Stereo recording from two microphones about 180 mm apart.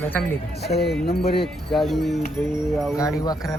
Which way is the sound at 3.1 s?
20° left (ahead or behind).